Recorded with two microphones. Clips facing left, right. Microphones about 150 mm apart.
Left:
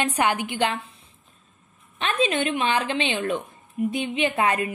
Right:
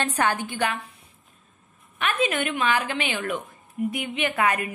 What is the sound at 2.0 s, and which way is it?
A woman's voice, 25° left (ahead or behind).